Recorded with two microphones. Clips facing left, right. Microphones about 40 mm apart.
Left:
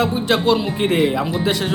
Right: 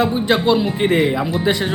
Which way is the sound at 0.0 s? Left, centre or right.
Right.